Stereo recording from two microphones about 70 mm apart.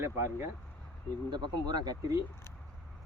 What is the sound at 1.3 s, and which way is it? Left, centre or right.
Speech, right.